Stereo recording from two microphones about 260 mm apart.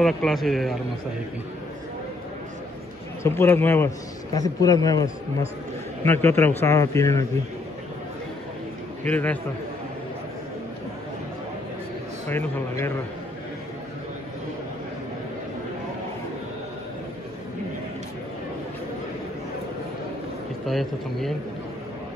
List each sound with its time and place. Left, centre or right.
0.0 s a man's voice: centre
3.3 s a man's voice: centre
9.0 s a man's voice: centre
12.3 s a man's voice: centre
20.6 s a man's voice: centre